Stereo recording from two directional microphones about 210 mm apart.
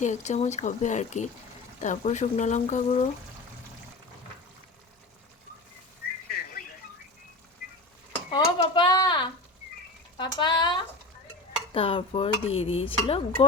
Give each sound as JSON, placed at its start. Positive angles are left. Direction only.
{"t": 0.0, "sound": "speech", "side_deg": 35}
{"t": 6.3, "sound": "a sound", "side_deg": 45}
{"t": 8.3, "sound": "speech", "side_deg": 20}